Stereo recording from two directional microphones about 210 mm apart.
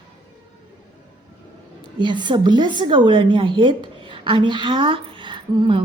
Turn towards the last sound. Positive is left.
turn(degrees=-20)  # may be behind; listen again after turning